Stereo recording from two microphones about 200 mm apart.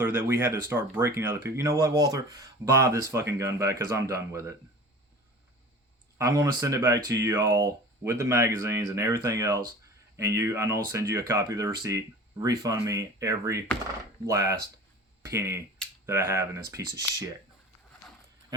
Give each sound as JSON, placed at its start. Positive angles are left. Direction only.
{"t": 0.0, "sound": "speech", "side_deg": -10}
{"t": 6.1, "sound": "speech", "side_deg": -15}